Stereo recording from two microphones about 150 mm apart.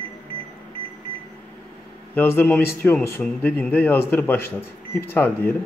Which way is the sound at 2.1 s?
15° left (ahead or behind).